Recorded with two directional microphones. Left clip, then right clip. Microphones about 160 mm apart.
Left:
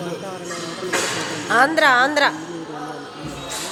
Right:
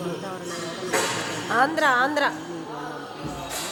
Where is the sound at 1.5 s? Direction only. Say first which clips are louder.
Left 6 dB; 20° left (ahead or behind).